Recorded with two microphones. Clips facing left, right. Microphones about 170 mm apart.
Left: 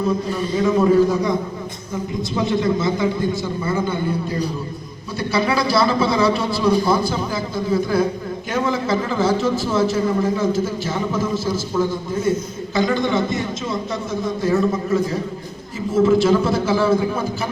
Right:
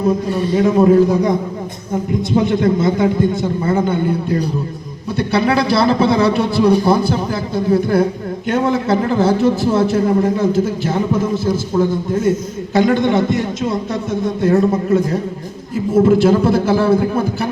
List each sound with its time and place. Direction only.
0.5 s a man's voice: 55° right (ahead or behind)
2.3 s a man's voice: 60° right (ahead or behind)
12.7 s a man's voice: 60° right (ahead or behind)